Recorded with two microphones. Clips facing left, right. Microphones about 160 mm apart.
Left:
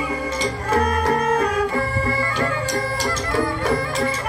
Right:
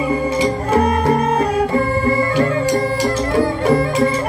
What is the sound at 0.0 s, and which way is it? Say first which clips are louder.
Music: right 7 dB; 30° right (ahead or behind).